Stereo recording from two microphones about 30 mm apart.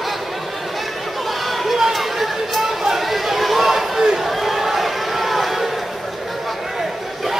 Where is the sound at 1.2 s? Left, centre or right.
Centre.